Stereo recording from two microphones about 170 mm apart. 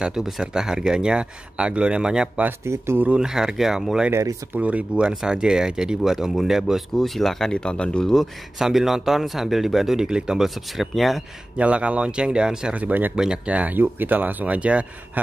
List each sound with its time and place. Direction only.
0.0 s speech: 5° right (ahead or behind)
4.1 s speech: 20° right (ahead or behind)
4.6 s speech: 10° right (ahead or behind)